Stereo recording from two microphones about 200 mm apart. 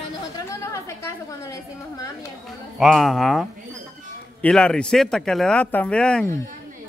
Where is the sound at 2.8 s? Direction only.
Centre (ahead or behind).